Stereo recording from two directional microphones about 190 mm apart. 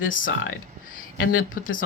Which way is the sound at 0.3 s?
90° left.